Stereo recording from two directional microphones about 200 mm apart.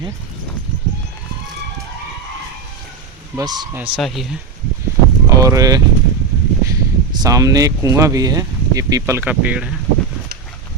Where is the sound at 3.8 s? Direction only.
Centre (ahead or behind).